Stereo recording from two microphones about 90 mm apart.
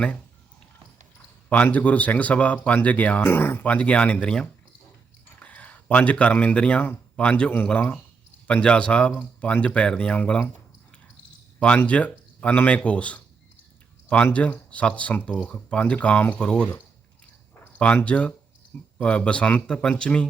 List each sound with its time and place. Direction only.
1.5 s speech: 15° left (ahead or behind)
3.2 s speech: 25° left (ahead or behind)
11.8 s speech: 15° left (ahead or behind)
14.3 s speech: 15° left (ahead or behind)